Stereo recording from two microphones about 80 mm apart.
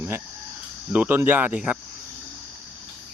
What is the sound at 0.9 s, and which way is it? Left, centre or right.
Speech, centre.